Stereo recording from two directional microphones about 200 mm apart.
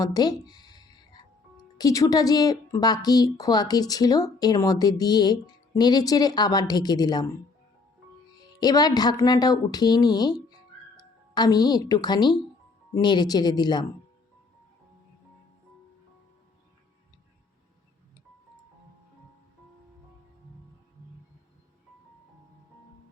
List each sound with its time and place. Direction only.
0.0 s a sound: 20° left (ahead or behind)
1.8 s a woman's voice: 15° left (ahead or behind)
8.6 s a woman's voice: 20° left (ahead or behind)